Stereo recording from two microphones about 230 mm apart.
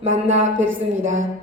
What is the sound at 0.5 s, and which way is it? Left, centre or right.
Speech, right.